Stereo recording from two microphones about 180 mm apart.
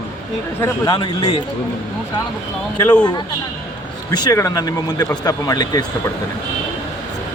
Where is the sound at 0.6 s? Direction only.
25° left (ahead or behind).